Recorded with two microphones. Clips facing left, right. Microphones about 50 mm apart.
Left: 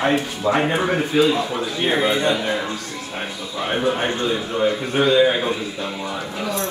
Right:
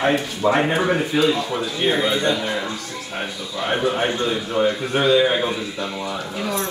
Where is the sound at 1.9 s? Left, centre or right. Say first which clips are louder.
Left 2 dB; left.